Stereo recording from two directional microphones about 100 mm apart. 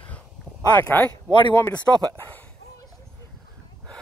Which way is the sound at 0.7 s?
20° left (ahead or behind).